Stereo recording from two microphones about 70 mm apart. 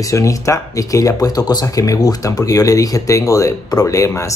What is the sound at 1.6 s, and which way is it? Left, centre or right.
Speech, left.